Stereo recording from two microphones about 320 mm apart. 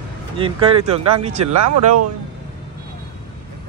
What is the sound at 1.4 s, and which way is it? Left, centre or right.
Speech, right.